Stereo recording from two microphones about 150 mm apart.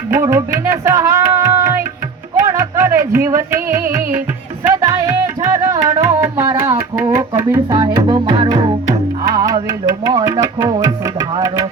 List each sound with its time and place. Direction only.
0.1 s music: 15° right (ahead or behind)
10.1 s speech: 25° right (ahead or behind)